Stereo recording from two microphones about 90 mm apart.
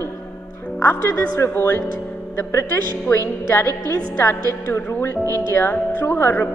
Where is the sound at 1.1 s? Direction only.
30° left (ahead or behind).